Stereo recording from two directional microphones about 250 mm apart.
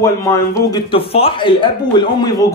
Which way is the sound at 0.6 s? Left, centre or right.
Left.